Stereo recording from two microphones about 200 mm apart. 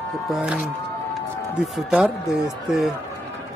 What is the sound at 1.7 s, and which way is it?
Speech, 5° right (ahead or behind).